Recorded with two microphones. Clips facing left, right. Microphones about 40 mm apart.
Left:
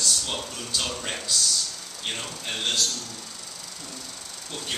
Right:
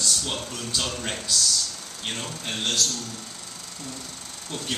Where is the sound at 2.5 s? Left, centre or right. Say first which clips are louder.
Even; left.